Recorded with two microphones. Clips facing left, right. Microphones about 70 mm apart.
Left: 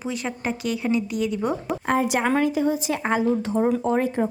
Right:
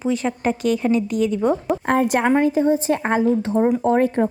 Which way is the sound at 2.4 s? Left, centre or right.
Right.